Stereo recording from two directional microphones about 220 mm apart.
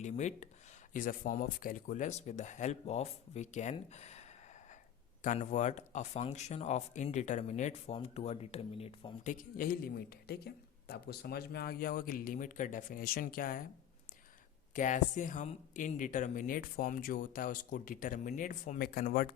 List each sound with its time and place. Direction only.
0.0 s speech: 30° left (ahead or behind)
14.7 s speech: 35° left (ahead or behind)